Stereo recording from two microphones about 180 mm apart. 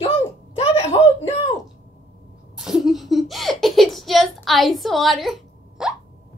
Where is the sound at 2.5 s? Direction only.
Centre (ahead or behind).